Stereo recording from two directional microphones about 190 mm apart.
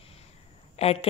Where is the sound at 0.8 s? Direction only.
30° left (ahead or behind).